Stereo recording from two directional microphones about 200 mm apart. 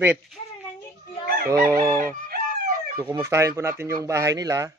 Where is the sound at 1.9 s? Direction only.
45° right (ahead or behind).